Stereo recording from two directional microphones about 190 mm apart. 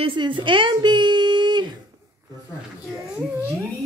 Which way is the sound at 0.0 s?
25° right (ahead or behind).